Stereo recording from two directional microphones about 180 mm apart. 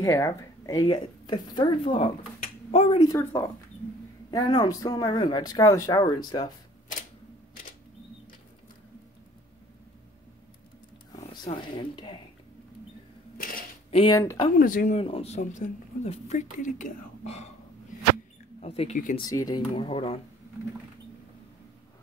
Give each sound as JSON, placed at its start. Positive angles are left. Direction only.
{"t": 0.0, "sound": "speech", "side_deg": 15}
{"t": 3.1, "sound": "speech", "side_deg": 15}
{"t": 11.2, "sound": "speech", "side_deg": 30}
{"t": 13.4, "sound": "a sound", "side_deg": 55}
{"t": 13.8, "sound": "a sound", "side_deg": 30}
{"t": 14.1, "sound": "speech", "side_deg": 20}
{"t": 14.6, "sound": "speech", "side_deg": 50}
{"t": 15.0, "sound": "speech", "side_deg": 35}
{"t": 18.6, "sound": "speech", "side_deg": 35}
{"t": 19.1, "sound": "speech", "side_deg": 20}